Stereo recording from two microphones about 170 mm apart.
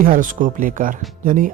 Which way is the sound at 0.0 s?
50° right (ahead or behind).